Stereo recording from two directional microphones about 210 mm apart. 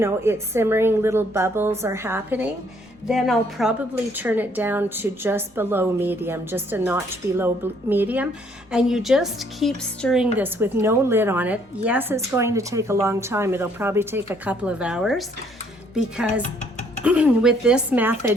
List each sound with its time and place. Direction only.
0.0 s a woman's voice: 10° right (ahead or behind)
16.4 s music: 35° left (ahead or behind)
17.0 s a woman's voice: 5° right (ahead or behind)